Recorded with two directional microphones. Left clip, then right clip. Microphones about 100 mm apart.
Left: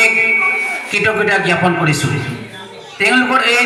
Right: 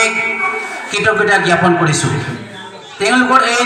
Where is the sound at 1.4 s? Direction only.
15° right (ahead or behind).